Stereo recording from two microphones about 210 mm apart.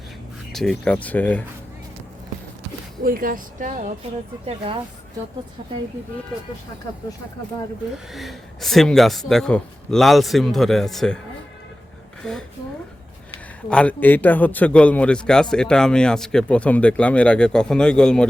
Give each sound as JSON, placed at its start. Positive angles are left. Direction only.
{"t": 0.5, "sound": "speech", "side_deg": 0}
{"t": 3.0, "sound": "speech", "side_deg": -40}
{"t": 4.4, "sound": "speech", "side_deg": -25}
{"t": 7.9, "sound": "a man's voice", "side_deg": 0}
{"t": 12.2, "sound": "a man's voice", "side_deg": 5}
{"t": 13.7, "sound": "a man's voice", "side_deg": 5}